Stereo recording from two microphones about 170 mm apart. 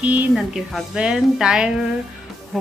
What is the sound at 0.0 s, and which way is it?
Speech, 10° right (ahead or behind).